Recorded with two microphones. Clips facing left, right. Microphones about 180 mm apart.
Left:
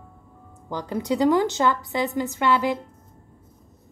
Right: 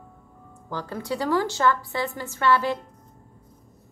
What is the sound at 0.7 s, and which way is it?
A woman's voice, 15° left (ahead or behind).